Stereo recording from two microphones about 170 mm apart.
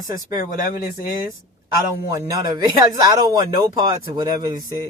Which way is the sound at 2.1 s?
20° right (ahead or behind).